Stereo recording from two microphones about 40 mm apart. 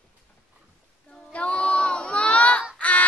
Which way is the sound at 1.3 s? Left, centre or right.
Left.